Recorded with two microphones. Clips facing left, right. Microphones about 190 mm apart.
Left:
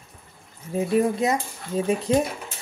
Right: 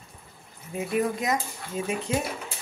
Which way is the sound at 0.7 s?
30° left (ahead or behind).